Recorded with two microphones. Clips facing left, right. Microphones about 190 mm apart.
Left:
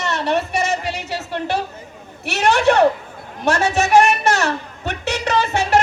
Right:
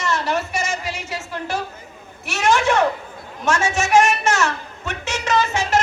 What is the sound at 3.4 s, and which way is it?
A woman's voice, 35° left (ahead or behind).